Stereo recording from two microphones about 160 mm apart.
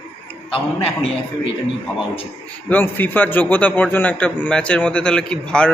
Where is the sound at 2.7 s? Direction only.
10° left (ahead or behind).